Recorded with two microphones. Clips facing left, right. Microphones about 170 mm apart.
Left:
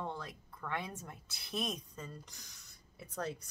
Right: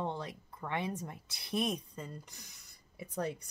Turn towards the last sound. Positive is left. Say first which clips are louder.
# right 3 dB
turn(degrees=-10)  # may be behind; listen again after turning